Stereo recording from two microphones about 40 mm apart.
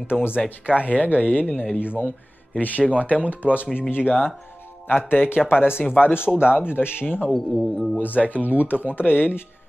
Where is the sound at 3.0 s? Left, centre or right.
Left.